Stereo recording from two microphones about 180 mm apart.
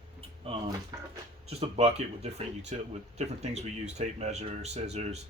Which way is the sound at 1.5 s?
35° right (ahead or behind).